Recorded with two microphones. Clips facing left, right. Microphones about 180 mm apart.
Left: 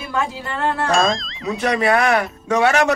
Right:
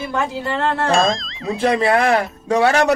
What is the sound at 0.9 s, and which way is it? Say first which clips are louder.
Speech: right 1 dB; centre (ahead or behind).